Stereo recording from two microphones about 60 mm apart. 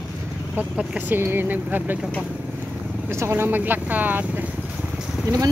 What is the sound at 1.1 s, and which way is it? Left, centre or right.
Speech, right.